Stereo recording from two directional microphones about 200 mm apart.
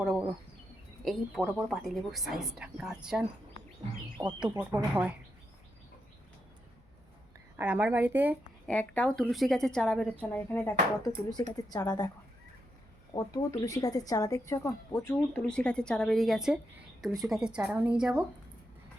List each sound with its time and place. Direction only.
1.0 s a woman's voice: centre (ahead or behind)
4.2 s speech: 15° right (ahead or behind)
7.5 s speech: 10° right (ahead or behind)
8.6 s a woman's voice: 5° left (ahead or behind)
13.1 s a woman's voice: 15° left (ahead or behind); by 18.3 s 5° right (ahead or behind)